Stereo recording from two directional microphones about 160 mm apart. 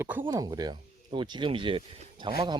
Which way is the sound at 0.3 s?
25° right (ahead or behind).